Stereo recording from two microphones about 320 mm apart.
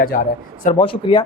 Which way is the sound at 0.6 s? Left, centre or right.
Centre.